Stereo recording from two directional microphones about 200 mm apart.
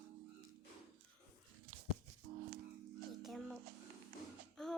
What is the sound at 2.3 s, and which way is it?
Music, 45° right (ahead or behind).